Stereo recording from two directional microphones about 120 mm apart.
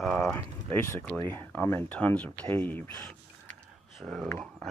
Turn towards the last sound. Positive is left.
turn(degrees=0)  # may be behind; listen again after turning